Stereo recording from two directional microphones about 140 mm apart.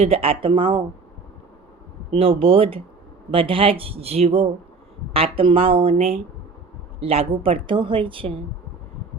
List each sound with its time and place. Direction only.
0.0 s a woman's voice: 45° right (ahead or behind)
2.0 s a woman's voice: 45° right (ahead or behind)